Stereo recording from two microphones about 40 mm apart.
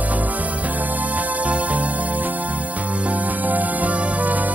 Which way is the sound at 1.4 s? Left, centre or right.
Right.